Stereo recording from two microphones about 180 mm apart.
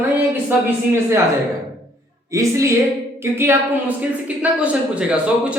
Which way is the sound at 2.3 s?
15° right (ahead or behind).